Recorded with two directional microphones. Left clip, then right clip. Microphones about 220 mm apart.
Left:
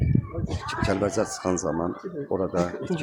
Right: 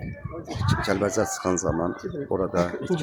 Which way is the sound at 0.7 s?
10° right (ahead or behind).